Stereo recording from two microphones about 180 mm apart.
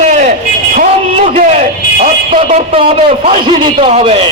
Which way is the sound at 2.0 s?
40° right (ahead or behind).